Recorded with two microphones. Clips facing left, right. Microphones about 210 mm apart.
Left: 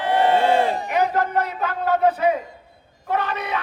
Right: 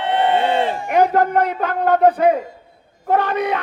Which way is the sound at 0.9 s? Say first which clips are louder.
Right 6 dB; 50° right (ahead or behind).